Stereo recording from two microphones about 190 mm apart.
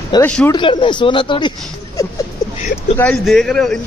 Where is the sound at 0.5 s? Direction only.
25° left (ahead or behind).